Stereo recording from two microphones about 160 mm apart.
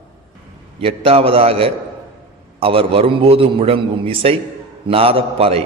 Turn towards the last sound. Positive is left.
turn(degrees=-35)  # may be behind; listen again after turning